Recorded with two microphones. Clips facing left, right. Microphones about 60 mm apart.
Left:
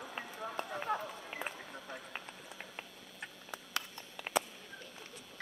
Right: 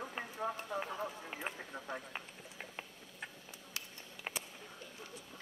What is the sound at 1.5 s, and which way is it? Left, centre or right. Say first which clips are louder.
Speech: right 3 dB; centre.